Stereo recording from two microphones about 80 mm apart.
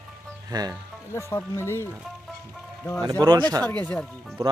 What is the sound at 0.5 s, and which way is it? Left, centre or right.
Speech, right.